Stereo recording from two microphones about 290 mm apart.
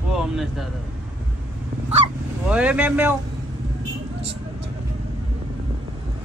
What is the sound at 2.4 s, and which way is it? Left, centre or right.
Speech, centre.